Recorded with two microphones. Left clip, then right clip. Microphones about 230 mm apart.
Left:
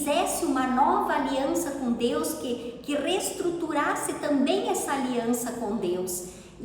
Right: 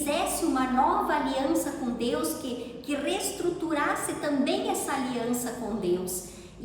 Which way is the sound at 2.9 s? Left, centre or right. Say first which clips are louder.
Left 2 dB; centre.